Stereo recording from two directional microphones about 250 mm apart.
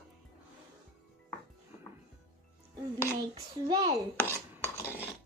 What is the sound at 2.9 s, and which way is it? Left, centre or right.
Speech, centre.